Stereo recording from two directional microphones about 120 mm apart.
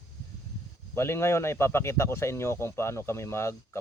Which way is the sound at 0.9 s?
20° left (ahead or behind).